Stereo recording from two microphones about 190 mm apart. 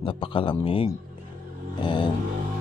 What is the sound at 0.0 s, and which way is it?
Speech, 25° left (ahead or behind).